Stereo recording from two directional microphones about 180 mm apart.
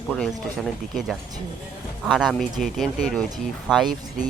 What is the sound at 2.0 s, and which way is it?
Speech, centre (ahead or behind).